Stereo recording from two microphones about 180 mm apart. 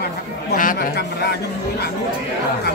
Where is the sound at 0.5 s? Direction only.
50° left (ahead or behind).